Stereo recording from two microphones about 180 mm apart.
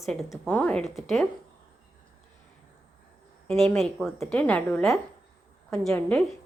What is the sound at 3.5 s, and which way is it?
A woman's voice, centre (ahead or behind).